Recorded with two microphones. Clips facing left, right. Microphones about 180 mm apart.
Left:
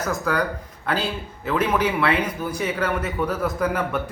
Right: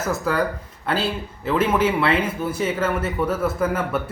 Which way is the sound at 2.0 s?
25° right (ahead or behind).